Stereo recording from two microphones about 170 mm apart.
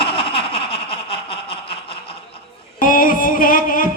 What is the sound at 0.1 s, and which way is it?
Baby laughter, 35° left (ahead or behind).